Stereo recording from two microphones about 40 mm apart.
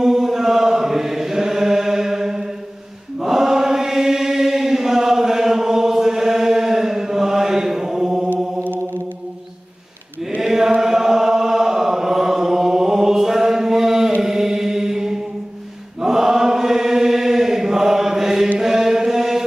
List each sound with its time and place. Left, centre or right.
0.0 s chant: centre
10.4 s chant: centre
14.2 s mantra: centre
16.0 s chant: centre